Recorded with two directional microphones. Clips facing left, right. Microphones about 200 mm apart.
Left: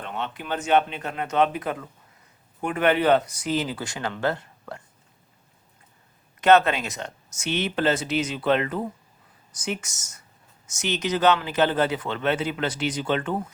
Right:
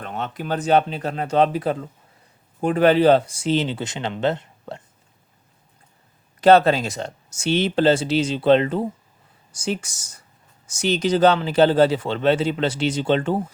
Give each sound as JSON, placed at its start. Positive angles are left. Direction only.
{"t": 0.0, "sound": "speech", "side_deg": -40}
{"t": 6.4, "sound": "speech", "side_deg": -35}